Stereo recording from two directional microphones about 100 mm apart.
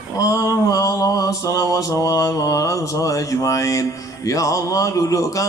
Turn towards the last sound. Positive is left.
turn(degrees=35)  # may be behind; listen again after turning